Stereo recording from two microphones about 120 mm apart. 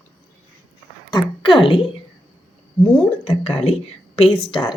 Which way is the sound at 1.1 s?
40° left (ahead or behind).